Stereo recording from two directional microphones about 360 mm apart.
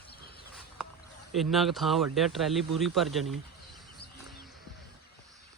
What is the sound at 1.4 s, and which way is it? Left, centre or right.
Speech, centre.